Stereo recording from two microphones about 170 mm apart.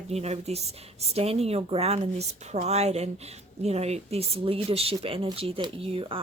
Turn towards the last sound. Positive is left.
turn(degrees=-35)  # may be behind; listen again after turning